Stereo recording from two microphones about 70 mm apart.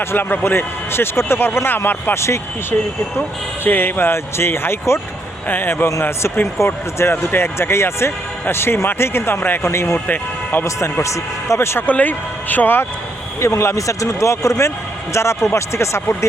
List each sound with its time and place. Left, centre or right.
0.0 s speech: left
3.6 s speech: left
9.7 s a man's voice: left
10.1 s speech: left
10.8 s a man's voice: left
11.9 s speech: left
13.4 s a man's voice: left